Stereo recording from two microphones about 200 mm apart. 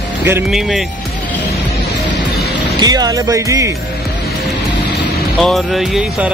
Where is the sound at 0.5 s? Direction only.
Centre (ahead or behind).